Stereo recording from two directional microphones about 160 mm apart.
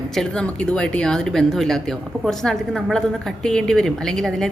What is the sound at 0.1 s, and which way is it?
Speech, 5° left (ahead or behind).